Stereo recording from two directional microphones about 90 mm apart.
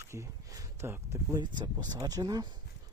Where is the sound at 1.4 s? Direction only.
55° right (ahead or behind).